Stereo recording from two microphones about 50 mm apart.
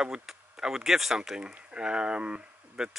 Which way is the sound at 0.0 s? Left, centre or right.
Centre.